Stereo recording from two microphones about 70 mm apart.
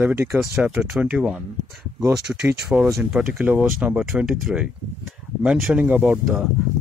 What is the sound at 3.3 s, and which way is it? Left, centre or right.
Speech, right.